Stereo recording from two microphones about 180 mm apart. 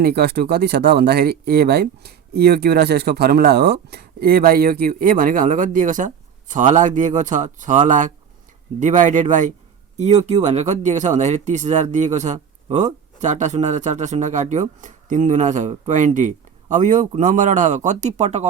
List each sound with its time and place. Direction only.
0.0 s speech: 60° right (ahead or behind); by 18.4 s 40° right (ahead or behind)